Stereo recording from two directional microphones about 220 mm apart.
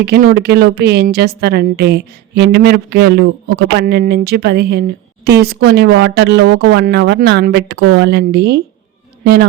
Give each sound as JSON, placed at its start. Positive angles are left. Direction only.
{"t": 0.0, "sound": "a woman's voice", "side_deg": -45}